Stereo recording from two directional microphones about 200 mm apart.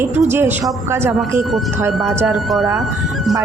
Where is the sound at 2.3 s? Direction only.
Centre (ahead or behind).